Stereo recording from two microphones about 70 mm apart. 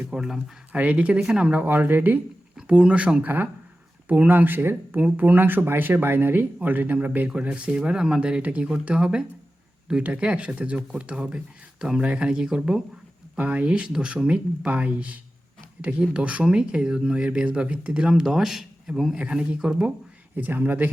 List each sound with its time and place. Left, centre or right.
0.1 s speech: centre
0.7 s speech: right
1.6 s speech: right
2.6 s speech: centre
3.2 s speech: right; by 12.8 s centre
13.3 s speech: right
20.3 s speech: right